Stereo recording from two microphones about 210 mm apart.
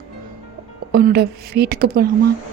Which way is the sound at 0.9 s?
45° right (ahead or behind).